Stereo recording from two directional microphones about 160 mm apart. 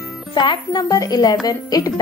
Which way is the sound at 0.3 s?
30° left (ahead or behind).